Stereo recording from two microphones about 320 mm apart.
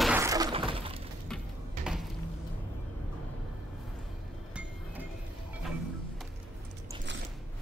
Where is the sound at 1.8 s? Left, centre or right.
Centre.